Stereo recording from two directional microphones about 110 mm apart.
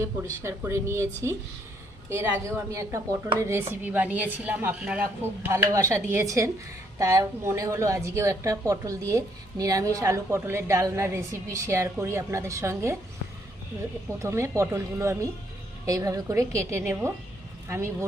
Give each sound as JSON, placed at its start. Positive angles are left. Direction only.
{"t": 0.4, "sound": "a woman's voice", "side_deg": -25}
{"t": 5.4, "sound": "a woman's voice", "side_deg": -25}
{"t": 14.2, "sound": "a woman's voice", "side_deg": -25}